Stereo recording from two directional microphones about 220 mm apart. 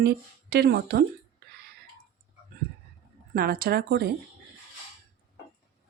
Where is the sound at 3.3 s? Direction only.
40° right (ahead or behind).